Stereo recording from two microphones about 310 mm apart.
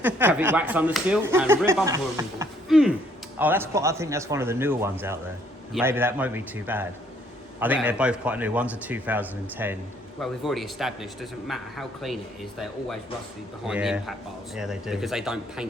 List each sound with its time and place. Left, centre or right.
0.0 s speech: centre
13.7 s speech: centre